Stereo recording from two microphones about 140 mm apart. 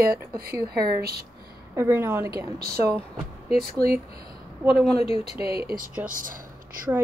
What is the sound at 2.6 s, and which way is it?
Speech, 90° right.